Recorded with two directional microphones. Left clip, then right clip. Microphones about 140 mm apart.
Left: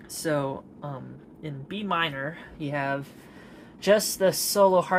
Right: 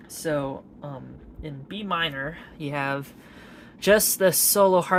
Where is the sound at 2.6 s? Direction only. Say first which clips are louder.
Right 1 dB; 35° right (ahead or behind).